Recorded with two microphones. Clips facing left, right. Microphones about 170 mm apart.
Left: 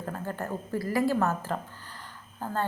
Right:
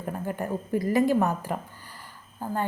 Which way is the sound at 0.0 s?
15° right (ahead or behind).